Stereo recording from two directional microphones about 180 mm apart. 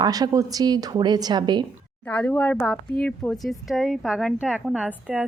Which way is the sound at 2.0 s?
5° left (ahead or behind).